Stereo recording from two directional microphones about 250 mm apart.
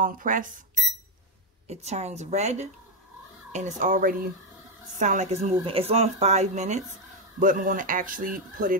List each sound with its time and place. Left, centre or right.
0.0 s speech: right
1.7 s speech: right